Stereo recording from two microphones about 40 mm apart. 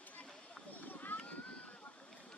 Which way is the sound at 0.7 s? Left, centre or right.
Left.